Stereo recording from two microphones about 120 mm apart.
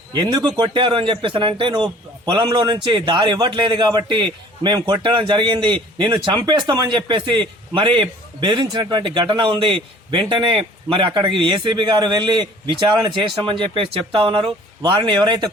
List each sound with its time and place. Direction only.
0.1 s a man's voice: 35° right (ahead or behind)